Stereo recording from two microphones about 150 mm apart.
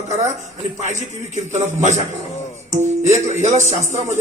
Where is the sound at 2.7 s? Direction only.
50° right (ahead or behind).